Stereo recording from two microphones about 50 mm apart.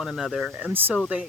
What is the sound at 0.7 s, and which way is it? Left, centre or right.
Speech, right.